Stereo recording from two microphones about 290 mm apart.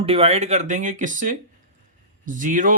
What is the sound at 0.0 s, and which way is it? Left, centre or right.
Speech, centre.